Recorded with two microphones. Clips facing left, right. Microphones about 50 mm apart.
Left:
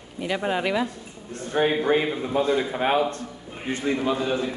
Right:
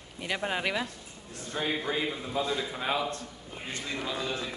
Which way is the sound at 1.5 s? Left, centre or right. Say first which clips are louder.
Left 10 dB; left.